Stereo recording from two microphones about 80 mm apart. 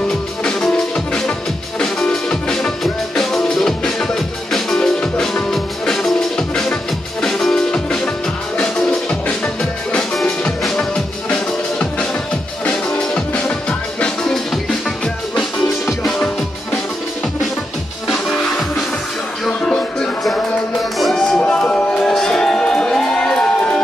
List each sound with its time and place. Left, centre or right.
0.4 s music: centre
19.4 s music: centre